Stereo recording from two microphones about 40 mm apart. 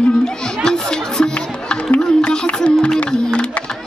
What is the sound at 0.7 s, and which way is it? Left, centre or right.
Music, centre.